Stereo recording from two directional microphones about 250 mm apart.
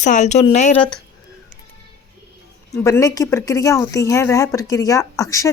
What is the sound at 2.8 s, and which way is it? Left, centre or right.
Speech, centre.